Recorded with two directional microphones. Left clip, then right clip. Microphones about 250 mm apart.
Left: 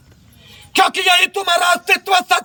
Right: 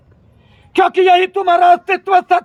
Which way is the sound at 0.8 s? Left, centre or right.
Centre.